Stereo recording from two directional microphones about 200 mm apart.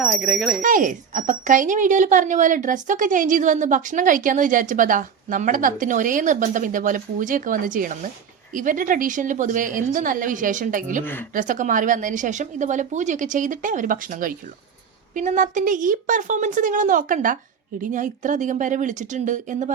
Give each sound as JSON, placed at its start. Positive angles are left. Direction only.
{"t": 0.0, "sound": "speech", "side_deg": 0}
{"t": 0.6, "sound": "speech", "side_deg": -40}
{"t": 11.0, "sound": "speech", "side_deg": 10}
{"t": 11.3, "sound": "speech", "side_deg": -40}